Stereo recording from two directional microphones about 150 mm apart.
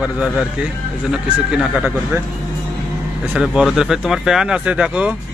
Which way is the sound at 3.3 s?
5° right (ahead or behind).